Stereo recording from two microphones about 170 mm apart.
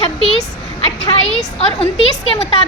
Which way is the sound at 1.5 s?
35° left (ahead or behind).